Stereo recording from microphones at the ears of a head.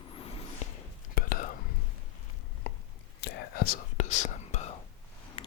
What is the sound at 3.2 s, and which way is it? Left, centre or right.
Whispering, left.